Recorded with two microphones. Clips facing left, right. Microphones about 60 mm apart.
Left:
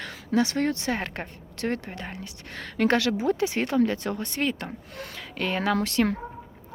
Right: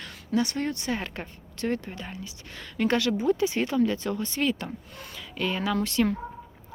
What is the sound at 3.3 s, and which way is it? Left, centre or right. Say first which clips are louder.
Speech: right 1 dB; left.